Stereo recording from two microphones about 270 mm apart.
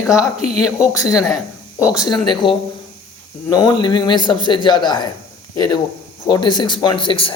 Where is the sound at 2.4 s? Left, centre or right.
Centre.